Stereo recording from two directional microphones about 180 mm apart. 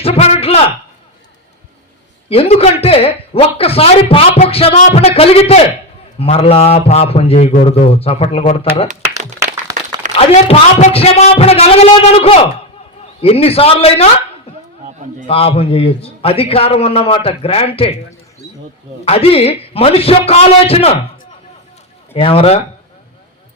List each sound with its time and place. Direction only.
0.0 s a sound: 35° left (ahead or behind)
2.3 s speech: 35° left (ahead or behind)
9.0 s a sound: 15° right (ahead or behind)
10.2 s speech: 35° left (ahead or behind)
15.3 s speech: 30° left (ahead or behind)
19.0 s speech: 35° left (ahead or behind)
22.1 s speech: 30° left (ahead or behind)